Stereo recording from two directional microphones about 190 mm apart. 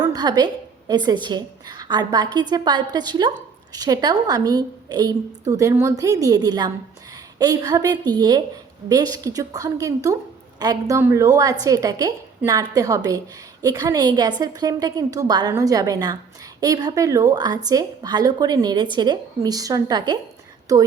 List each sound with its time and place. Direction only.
0.0 s a woman's voice: 20° right (ahead or behind)